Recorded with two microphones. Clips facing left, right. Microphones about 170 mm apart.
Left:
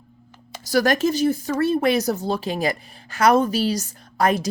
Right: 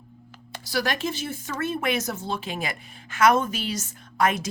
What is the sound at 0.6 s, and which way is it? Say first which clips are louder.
Speech: left 8 dB; 45° left (ahead or behind).